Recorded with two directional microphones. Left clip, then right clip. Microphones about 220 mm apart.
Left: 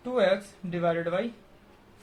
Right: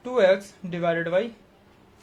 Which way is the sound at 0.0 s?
45° right (ahead or behind).